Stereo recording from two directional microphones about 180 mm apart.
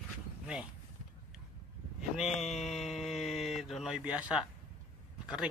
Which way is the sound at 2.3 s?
40° left (ahead or behind).